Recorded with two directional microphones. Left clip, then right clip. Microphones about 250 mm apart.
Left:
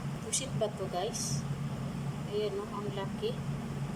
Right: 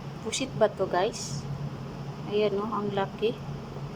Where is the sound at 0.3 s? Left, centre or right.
Centre.